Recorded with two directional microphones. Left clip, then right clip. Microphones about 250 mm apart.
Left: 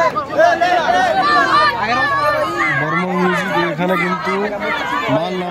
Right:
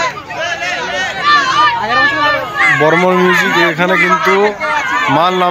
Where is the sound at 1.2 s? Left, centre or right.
Left.